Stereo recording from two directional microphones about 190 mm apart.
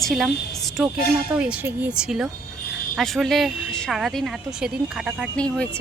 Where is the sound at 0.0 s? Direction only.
Centre (ahead or behind).